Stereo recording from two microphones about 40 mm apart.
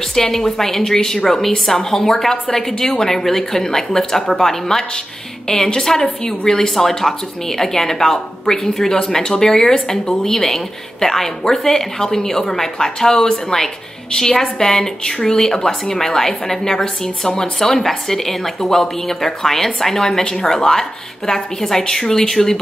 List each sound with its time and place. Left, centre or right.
0.1 s speech: centre